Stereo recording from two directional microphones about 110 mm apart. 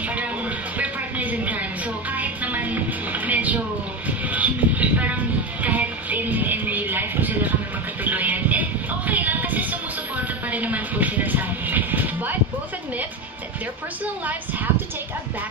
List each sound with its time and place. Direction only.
0.7 s music: 15° right (ahead or behind)
4.3 s train: 15° right (ahead or behind)
8.0 s music: 15° right (ahead or behind)